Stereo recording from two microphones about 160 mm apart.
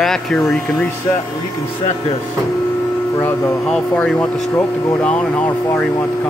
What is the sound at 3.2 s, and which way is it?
Speech, 10° left (ahead or behind).